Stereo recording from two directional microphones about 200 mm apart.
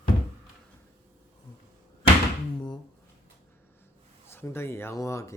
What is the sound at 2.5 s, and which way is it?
Speech, 20° left (ahead or behind).